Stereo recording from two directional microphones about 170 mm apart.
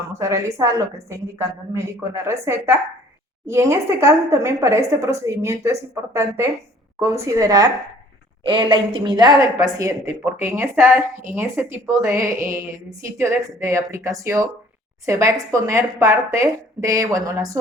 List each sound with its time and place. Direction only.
0.1 s speech: 15° right (ahead or behind)